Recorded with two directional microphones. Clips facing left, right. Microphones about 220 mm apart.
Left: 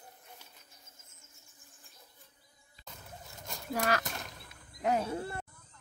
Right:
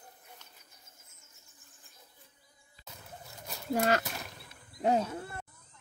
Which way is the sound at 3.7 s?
25° right (ahead or behind).